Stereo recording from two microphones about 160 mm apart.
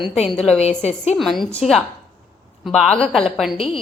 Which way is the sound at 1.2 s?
Centre (ahead or behind).